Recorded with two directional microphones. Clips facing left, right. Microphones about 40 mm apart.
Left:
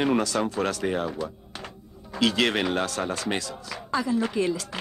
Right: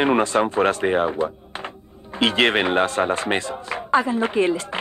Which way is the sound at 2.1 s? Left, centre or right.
Right.